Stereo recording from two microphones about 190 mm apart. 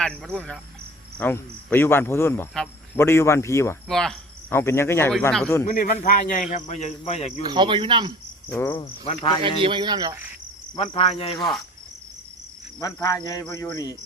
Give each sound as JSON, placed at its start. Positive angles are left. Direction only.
{"t": 0.0, "sound": "speech", "side_deg": 5}
{"t": 1.2, "sound": "cricket", "side_deg": 10}
{"t": 3.8, "sound": "cricket", "side_deg": 0}
{"t": 5.6, "sound": "speech", "side_deg": 45}
{"t": 7.4, "sound": "speech", "side_deg": -25}
{"t": 8.5, "sound": "cricket", "side_deg": 15}
{"t": 9.6, "sound": "speech", "side_deg": -25}
{"t": 10.8, "sound": "speech", "side_deg": 35}
{"t": 12.8, "sound": "cricket", "side_deg": 15}